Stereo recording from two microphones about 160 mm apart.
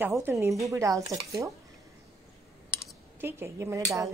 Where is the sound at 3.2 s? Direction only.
15° right (ahead or behind).